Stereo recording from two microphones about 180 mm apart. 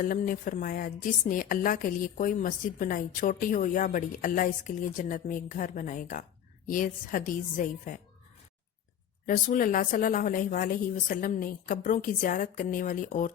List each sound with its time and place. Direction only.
0.0 s a woman's voice: 50° left (ahead or behind)
9.2 s a woman's voice: 50° left (ahead or behind)